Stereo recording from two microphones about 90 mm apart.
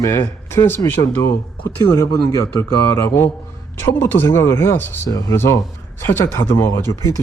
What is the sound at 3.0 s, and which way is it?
Speech, 25° left (ahead or behind).